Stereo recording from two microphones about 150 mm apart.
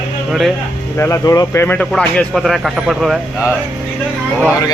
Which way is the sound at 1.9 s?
5° left (ahead or behind).